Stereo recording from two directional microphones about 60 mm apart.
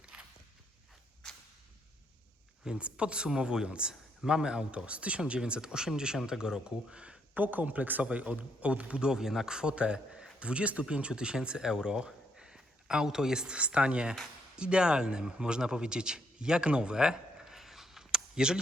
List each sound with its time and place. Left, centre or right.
0.0 s walk: centre
2.6 s speech: centre
7.3 s a man's voice: right; by 18.6 s centre